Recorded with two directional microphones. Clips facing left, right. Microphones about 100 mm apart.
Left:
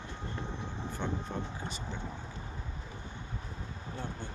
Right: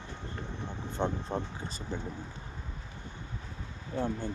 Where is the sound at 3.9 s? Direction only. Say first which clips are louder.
Right 10 dB; 45° right (ahead or behind).